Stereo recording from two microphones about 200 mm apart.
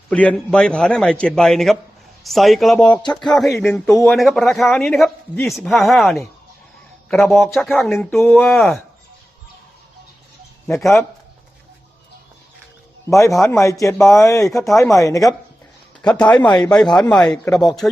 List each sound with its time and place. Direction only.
0.1 s a man's voice: 5° left (ahead or behind)
13.1 s a man's voice: 15° left (ahead or behind)
16.0 s a man's voice: 5° left (ahead or behind)